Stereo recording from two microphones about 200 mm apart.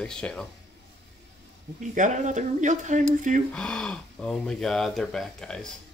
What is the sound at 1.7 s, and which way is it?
Speech, 40° right (ahead or behind).